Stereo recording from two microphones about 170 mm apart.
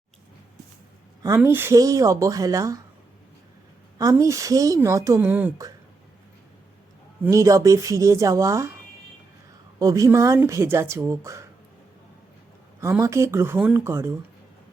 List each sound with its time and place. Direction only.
1.4 s a woman's voice: 10° right (ahead or behind)
3.9 s a woman's voice: 20° right (ahead or behind)
7.3 s a woman's voice: 20° right (ahead or behind)
9.7 s speech: 20° right (ahead or behind)
12.8 s speech: 15° right (ahead or behind)